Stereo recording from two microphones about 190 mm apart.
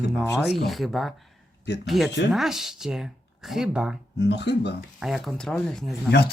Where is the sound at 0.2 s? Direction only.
Centre (ahead or behind).